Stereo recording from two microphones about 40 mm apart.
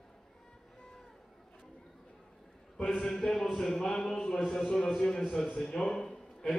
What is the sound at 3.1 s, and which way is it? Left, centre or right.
A man's voice, centre.